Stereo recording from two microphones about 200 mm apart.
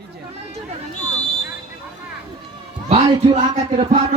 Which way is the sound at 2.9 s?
30° right (ahead or behind).